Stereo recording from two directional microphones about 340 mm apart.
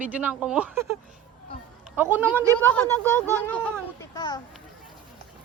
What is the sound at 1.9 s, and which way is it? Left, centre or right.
Speech, centre.